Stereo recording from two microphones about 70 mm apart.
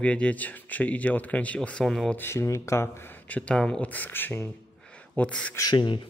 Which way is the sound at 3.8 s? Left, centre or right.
Left.